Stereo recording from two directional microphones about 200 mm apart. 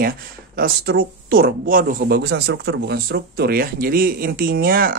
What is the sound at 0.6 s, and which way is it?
Speech, 45° right (ahead or behind).